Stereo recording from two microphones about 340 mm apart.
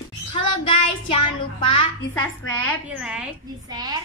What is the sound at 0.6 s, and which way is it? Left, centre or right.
Child singing, centre.